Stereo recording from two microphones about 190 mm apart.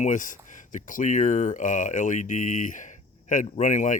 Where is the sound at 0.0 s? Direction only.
40° left (ahead or behind).